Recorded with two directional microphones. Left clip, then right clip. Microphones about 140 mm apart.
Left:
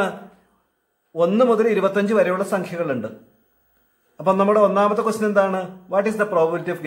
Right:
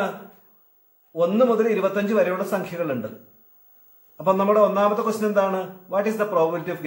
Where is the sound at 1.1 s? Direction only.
30° left (ahead or behind).